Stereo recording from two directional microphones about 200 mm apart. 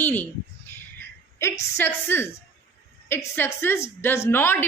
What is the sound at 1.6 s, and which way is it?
A woman's voice, 10° left (ahead or behind).